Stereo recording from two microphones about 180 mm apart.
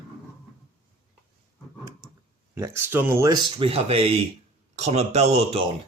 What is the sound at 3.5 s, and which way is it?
Speech, 30° right (ahead or behind).